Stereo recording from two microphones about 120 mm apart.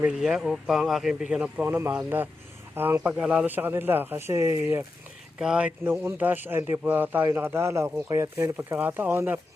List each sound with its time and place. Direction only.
0.0 s speech: 5° right (ahead or behind); by 4.9 s 20° right (ahead or behind)
5.4 s speech: 10° right (ahead or behind)